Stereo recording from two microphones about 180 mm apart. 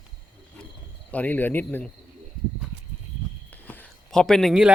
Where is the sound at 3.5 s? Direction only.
10° left (ahead or behind).